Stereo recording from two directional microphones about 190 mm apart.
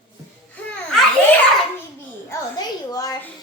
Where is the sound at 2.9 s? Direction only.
20° left (ahead or behind).